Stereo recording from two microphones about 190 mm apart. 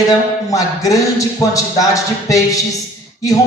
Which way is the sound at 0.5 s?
15° left (ahead or behind).